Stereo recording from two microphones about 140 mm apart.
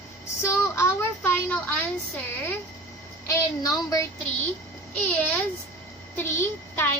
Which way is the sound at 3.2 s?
25° left (ahead or behind).